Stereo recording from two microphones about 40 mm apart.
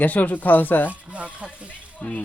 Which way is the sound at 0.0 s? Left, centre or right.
Left.